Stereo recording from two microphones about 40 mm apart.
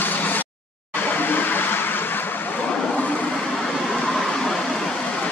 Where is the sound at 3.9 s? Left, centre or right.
Centre.